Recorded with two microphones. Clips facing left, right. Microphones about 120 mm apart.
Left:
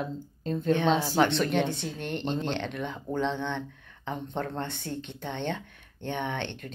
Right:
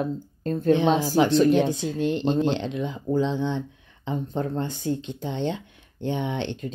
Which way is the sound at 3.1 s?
60° left (ahead or behind).